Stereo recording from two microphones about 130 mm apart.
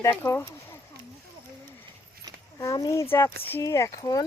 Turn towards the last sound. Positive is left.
turn(degrees=30)  # may be behind; listen again after turning